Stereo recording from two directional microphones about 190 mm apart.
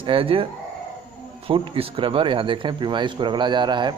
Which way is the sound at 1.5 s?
30° right (ahead or behind).